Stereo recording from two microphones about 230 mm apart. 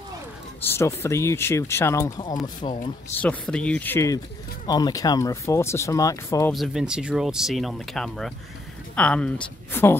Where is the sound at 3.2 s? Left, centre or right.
Centre.